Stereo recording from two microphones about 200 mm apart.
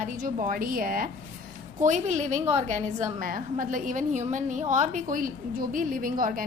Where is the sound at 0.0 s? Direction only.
40° right (ahead or behind).